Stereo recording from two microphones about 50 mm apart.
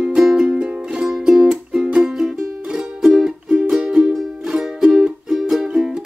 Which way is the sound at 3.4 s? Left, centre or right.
Right.